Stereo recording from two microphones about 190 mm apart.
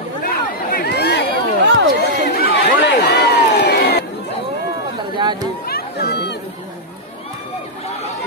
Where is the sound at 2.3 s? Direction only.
55° left (ahead or behind).